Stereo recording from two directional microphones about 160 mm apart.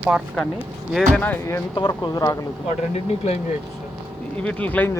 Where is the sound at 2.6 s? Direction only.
40° left (ahead or behind).